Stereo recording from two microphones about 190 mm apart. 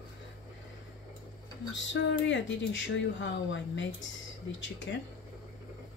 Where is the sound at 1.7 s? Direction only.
75° left (ahead or behind).